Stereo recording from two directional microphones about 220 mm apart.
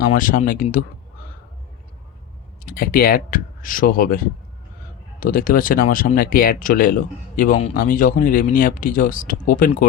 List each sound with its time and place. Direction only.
0.1 s speech: 35° left (ahead or behind)
2.6 s speech: 40° left (ahead or behind)